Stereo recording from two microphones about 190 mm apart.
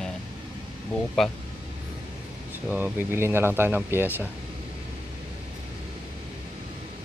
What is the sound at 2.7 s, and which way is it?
A man's voice, 10° right (ahead or behind).